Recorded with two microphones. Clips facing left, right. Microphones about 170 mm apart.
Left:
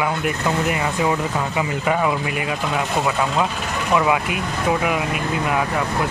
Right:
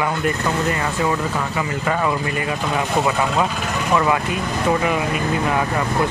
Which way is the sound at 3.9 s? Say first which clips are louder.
Even; 10° left (ahead or behind).